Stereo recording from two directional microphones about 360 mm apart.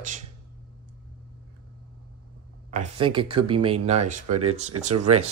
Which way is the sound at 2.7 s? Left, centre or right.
Centre.